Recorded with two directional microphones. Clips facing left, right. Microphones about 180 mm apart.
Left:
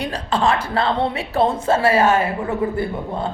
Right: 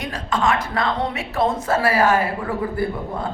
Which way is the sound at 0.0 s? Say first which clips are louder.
Left 2 dB; 30° left (ahead or behind).